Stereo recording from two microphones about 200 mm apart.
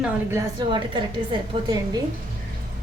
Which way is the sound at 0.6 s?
25° right (ahead or behind).